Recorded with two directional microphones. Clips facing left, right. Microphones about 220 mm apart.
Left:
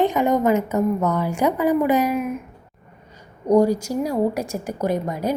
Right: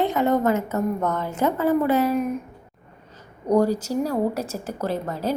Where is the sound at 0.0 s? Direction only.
15° left (ahead or behind).